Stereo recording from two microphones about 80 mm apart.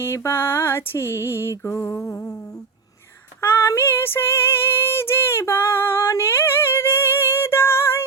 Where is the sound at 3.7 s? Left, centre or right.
Left.